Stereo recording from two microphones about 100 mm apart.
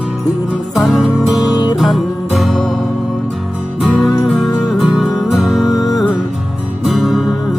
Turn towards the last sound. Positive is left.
turn(degrees=0)  # may be behind; listen again after turning